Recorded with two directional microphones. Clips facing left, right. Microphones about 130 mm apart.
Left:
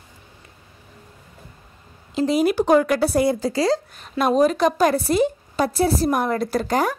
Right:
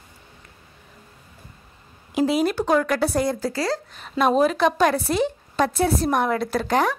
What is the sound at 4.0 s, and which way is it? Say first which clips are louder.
A woman's voice: even; centre (ahead or behind).